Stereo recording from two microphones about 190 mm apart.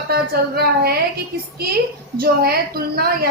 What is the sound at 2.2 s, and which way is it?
Speech, 55° right (ahead or behind).